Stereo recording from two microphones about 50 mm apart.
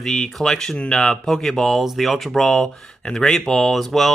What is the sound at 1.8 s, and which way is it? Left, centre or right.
Speech, centre.